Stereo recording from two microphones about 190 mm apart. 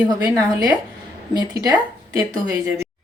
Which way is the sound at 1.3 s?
20° right (ahead or behind).